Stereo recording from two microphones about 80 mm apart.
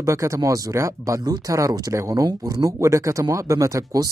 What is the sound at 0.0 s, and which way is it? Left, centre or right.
Speech, right.